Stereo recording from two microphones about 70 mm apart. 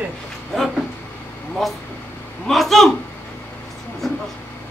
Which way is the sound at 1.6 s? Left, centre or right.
Centre.